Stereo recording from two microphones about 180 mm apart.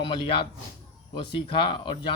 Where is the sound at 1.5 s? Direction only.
25° left (ahead or behind).